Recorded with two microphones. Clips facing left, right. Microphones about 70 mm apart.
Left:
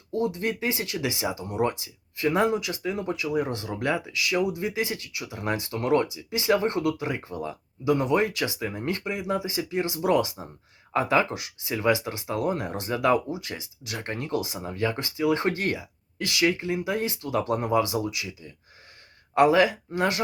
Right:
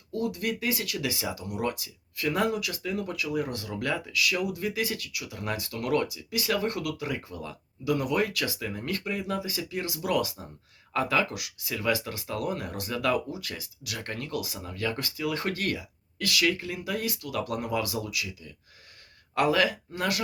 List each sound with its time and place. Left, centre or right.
0.1 s speech: left